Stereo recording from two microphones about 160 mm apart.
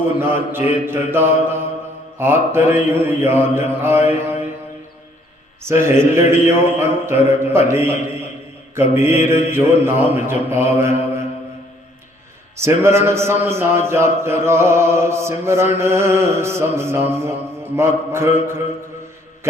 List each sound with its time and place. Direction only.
0.2 s a man's voice: 15° right (ahead or behind)
5.6 s a man's voice: 15° right (ahead or behind)
12.5 s a man's voice: 15° right (ahead or behind)